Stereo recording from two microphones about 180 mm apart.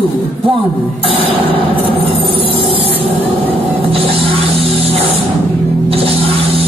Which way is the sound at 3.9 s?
30° right (ahead or behind).